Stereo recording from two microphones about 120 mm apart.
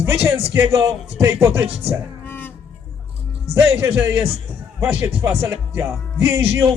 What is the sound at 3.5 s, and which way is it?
Speech, 20° right (ahead or behind).